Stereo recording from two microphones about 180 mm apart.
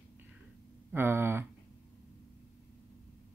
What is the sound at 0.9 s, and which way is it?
Speech, 10° right (ahead or behind).